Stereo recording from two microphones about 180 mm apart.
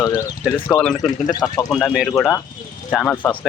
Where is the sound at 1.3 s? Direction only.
20° left (ahead or behind).